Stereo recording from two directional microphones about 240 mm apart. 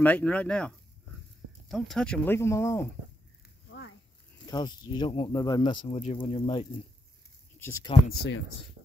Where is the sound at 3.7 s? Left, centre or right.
Left.